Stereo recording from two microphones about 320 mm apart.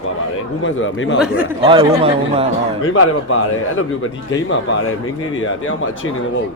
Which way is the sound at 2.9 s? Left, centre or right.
Left.